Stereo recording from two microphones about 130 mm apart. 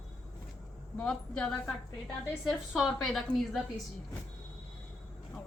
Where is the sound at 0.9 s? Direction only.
5° left (ahead or behind).